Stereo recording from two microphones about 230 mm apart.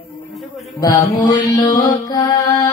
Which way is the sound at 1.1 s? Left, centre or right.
Centre.